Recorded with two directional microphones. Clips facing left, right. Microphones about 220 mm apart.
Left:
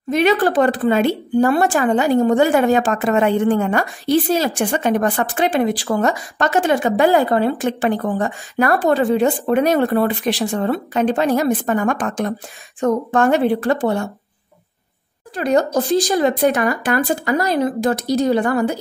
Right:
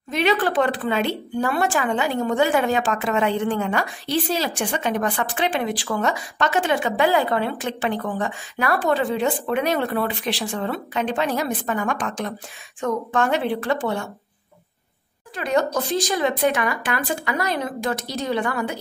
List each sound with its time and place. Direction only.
0.1 s speech: 45° left (ahead or behind)
15.3 s speech: 40° left (ahead or behind)